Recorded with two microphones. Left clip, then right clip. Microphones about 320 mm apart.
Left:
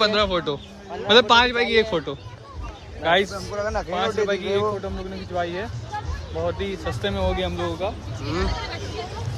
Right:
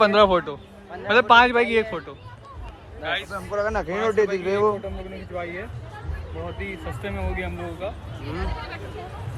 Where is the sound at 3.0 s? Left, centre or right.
Centre.